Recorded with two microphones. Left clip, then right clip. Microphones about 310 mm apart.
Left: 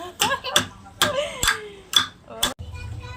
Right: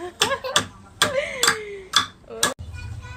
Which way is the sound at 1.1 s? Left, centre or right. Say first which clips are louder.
Right 2 dB; centre.